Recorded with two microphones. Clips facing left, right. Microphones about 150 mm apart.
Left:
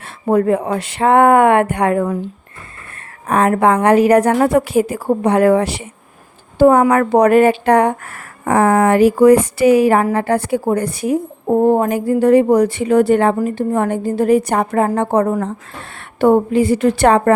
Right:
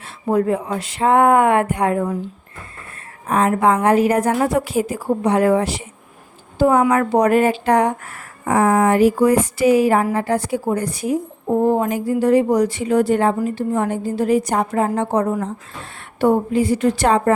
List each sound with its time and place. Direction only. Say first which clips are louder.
0.0 s speech: left 4 dB; 60° left (ahead or behind); by 4.4 s 85° left
4.4 s speech: left 5 dB; 60° left (ahead or behind)
6.6 s speech: left 4 dB; 55° left (ahead or behind)